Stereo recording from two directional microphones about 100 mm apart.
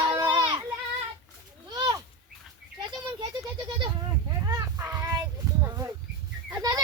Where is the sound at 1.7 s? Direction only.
35° right (ahead or behind).